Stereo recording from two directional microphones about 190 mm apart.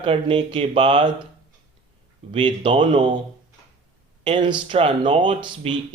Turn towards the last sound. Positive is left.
turn(degrees=-25)  # may be behind; listen again after turning